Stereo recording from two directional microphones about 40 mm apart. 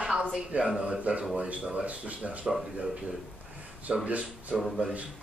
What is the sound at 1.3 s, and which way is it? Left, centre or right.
Speech, right.